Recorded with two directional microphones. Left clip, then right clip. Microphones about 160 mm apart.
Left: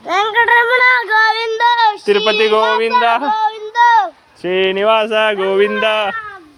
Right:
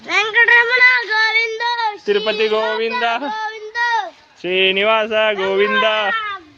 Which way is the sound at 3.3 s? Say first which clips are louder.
Left 8 dB; 25° left (ahead or behind).